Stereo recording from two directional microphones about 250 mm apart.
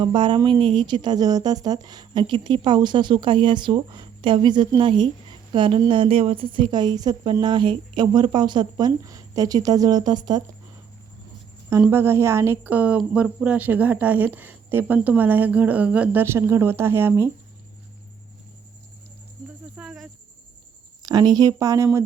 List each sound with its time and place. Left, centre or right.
0.0 s a woman's voice: centre
11.7 s a woman's voice: centre
19.7 s cricket: centre
21.0 s a woman's voice: centre